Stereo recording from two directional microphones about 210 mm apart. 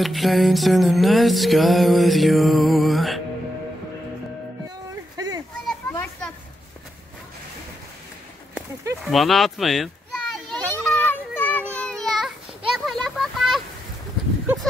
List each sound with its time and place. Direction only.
0.0 s music: centre (ahead or behind)
4.6 s music: 20° right (ahead or behind)
5.7 s children playing: 5° left (ahead or behind)
8.5 s a sound: centre (ahead or behind)